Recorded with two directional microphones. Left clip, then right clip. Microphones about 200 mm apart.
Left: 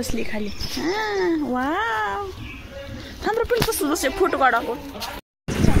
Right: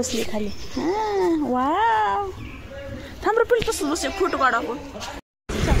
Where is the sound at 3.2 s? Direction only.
20° right (ahead or behind).